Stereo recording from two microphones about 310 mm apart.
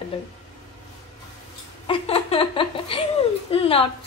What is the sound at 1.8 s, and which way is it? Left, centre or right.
Speech, centre.